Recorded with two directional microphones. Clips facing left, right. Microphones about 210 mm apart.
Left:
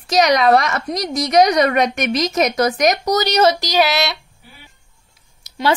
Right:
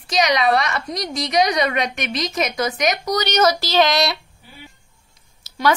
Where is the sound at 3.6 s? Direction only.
10° left (ahead or behind).